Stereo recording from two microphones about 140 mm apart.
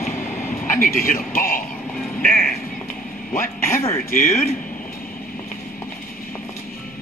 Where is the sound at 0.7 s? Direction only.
90° left.